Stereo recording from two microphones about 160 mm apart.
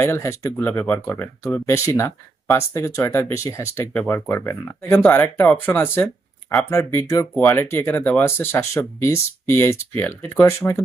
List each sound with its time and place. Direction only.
0.0 s speech: 15° left (ahead or behind)